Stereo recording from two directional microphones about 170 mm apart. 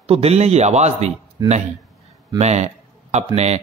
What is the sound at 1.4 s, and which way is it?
Speech, 20° right (ahead or behind).